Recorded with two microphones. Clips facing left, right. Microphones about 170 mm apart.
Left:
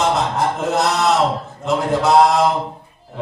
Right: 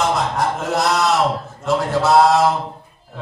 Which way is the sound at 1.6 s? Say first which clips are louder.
Even; 20° left (ahead or behind).